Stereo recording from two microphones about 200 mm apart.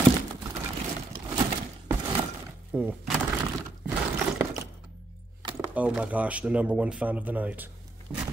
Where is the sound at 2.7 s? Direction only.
10° right (ahead or behind).